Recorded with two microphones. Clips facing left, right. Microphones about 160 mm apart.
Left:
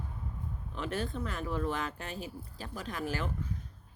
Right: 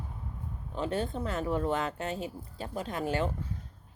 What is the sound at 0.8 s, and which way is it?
Speech, 30° right (ahead or behind).